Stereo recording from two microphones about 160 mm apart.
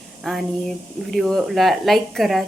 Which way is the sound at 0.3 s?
Centre (ahead or behind).